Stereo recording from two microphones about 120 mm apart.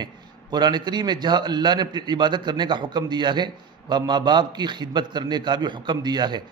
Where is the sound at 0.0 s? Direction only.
35° right (ahead or behind).